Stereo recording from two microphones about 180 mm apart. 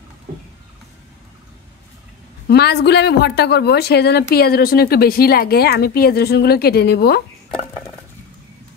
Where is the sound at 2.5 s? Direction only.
65° left (ahead or behind).